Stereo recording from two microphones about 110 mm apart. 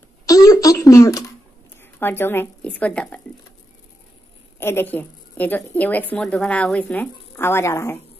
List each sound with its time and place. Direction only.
0.3 s a sound: 30° left (ahead or behind)
1.8 s a woman's voice: 20° left (ahead or behind)
4.6 s a woman's voice: 20° left (ahead or behind)